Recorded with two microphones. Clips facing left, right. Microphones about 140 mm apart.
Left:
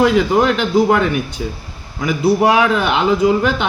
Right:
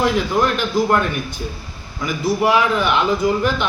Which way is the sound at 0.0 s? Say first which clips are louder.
Left 5 dB; 75° left (ahead or behind).